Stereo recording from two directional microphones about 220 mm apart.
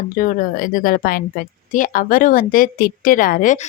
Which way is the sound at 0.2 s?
35° left (ahead or behind).